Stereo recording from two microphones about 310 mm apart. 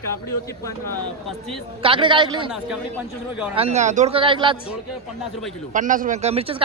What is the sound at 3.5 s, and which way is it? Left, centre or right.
Speech, centre.